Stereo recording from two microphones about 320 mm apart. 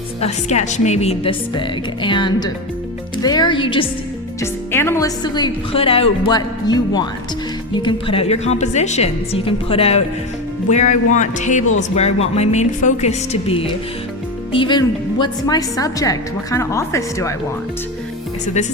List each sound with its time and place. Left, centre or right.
0.2 s a woman's voice: left